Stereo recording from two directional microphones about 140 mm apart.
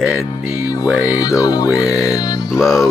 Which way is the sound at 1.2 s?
25° left (ahead or behind).